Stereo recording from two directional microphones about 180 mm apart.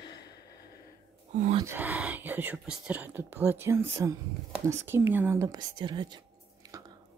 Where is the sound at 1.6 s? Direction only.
10° right (ahead or behind).